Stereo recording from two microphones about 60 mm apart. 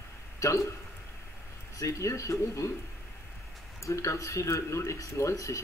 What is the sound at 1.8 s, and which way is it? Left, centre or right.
Speech, left.